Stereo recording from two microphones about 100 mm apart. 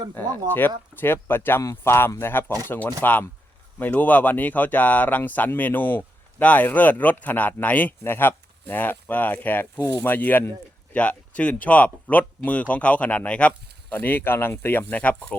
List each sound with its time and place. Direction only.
0.1 s speech: 20° left (ahead or behind)